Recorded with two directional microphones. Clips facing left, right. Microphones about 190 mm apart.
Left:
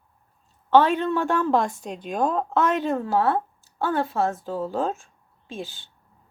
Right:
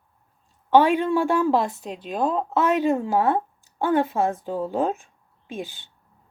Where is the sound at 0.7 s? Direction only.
10° right (ahead or behind).